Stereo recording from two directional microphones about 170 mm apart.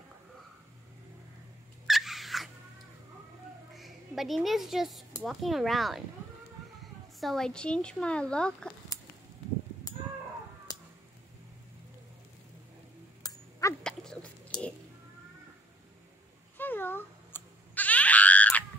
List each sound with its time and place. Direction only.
1.9 s dog: centre (ahead or behind)
3.7 s speech: centre (ahead or behind)
7.2 s speech: centre (ahead or behind)
10.7 s tick-tock: 20° left (ahead or behind)
13.2 s a sound: 20° left (ahead or behind)
13.8 s dog: 5° left (ahead or behind)
14.5 s a sound: 25° left (ahead or behind)
16.5 s screaming: 10° left (ahead or behind)